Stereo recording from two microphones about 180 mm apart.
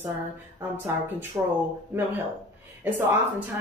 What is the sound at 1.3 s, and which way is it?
Speech, 15° right (ahead or behind).